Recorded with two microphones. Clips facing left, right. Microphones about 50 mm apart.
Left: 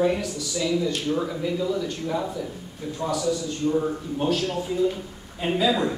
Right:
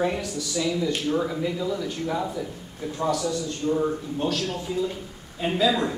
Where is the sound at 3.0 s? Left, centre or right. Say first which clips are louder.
Right 2 dB; right.